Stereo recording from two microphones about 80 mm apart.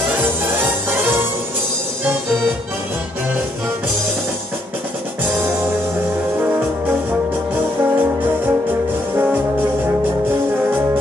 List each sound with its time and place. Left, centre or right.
0.1 s music: right
7.1 s brass instrument: right
9.1 s music: right